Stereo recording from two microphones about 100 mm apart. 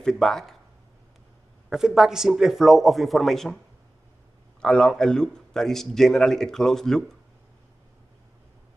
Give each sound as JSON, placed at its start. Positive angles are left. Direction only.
{"t": 0.0, "sound": "speech", "side_deg": 5}
{"t": 1.7, "sound": "speech", "side_deg": -5}
{"t": 4.6, "sound": "speech", "side_deg": 10}